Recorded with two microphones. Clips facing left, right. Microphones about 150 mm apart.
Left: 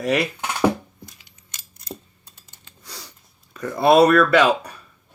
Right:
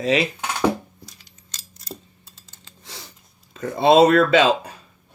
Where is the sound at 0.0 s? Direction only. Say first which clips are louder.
Right 1 dB; 65° left (ahead or behind).